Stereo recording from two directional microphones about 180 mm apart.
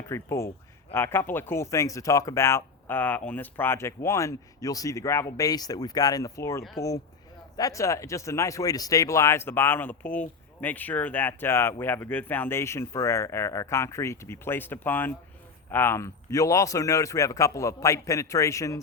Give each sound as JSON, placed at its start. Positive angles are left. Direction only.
{"t": 0.1, "sound": "speech", "side_deg": 15}